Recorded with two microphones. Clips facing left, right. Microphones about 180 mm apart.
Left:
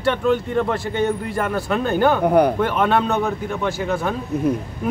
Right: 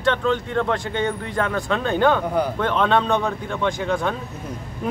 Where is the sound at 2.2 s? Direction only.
60° left (ahead or behind).